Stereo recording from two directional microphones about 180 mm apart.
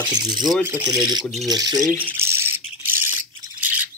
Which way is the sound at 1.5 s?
20° right (ahead or behind).